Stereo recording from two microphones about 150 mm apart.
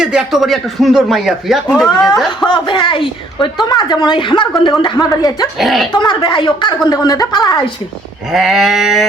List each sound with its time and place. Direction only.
0.0 s speech: 5° right (ahead or behind)
2.4 s a woman's voice: 30° left (ahead or behind)
5.5 s speech: centre (ahead or behind)
5.9 s a woman's voice: 30° left (ahead or behind)
8.3 s speech: centre (ahead or behind)